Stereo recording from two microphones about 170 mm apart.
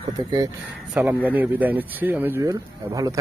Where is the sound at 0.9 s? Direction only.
10° right (ahead or behind).